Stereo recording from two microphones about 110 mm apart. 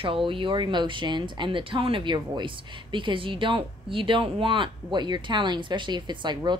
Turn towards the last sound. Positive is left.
turn(degrees=-40)  # may be behind; listen again after turning